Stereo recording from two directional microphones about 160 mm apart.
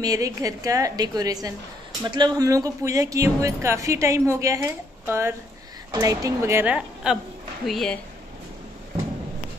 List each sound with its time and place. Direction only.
0.0 s a woman's voice: 20° right (ahead or behind); by 8.0 s centre (ahead or behind)